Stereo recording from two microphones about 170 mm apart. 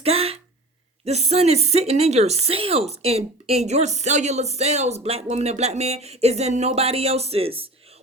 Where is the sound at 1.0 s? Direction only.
40° right (ahead or behind).